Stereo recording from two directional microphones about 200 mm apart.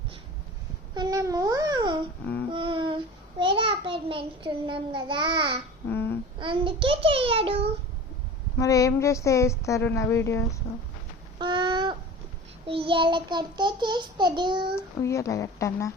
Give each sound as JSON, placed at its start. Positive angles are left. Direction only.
{"t": 0.9, "sound": "babbling", "side_deg": -15}
{"t": 2.5, "sound": "a sound", "side_deg": -25}
{"t": 3.3, "sound": "a child's voice", "side_deg": -25}
{"t": 5.9, "sound": "a sound", "side_deg": 10}
{"t": 6.4, "sound": "child singing", "side_deg": -25}
{"t": 8.5, "sound": "a woman's voice", "side_deg": 15}
{"t": 11.3, "sound": "a sound", "side_deg": -25}
{"t": 12.6, "sound": "child singing", "side_deg": -25}
{"t": 15.0, "sound": "a woman's voice", "side_deg": 15}